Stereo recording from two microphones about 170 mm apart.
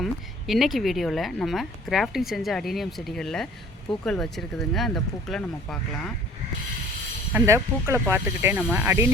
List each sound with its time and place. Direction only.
0.0 s speech: centre (ahead or behind)
7.3 s speech: 15° right (ahead or behind)